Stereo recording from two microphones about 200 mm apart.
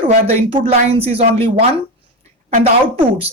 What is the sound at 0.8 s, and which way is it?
Speech, 30° right (ahead or behind).